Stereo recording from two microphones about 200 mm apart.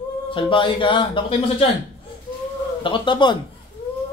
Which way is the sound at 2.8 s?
25° left (ahead or behind).